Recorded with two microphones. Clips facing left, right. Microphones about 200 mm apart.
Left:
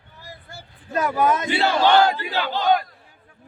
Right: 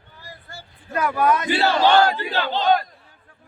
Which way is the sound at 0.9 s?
20° left (ahead or behind).